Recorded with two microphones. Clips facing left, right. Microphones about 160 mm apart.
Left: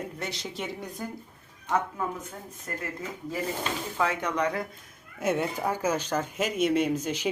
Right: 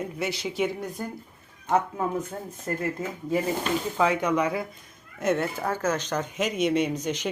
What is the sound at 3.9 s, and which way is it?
Speech, 15° right (ahead or behind).